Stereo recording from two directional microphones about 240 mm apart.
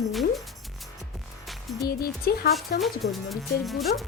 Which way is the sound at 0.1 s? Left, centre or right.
Centre.